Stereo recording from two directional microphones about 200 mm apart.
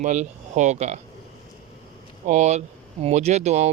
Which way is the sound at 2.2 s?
35° right (ahead or behind).